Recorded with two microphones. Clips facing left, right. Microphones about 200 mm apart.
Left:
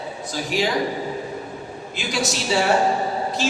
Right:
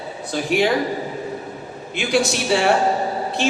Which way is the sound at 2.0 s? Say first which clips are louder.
Right 6 dB; 60° right (ahead or behind).